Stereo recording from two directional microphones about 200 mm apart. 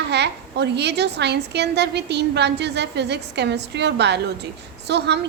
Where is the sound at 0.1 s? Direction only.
60° right (ahead or behind).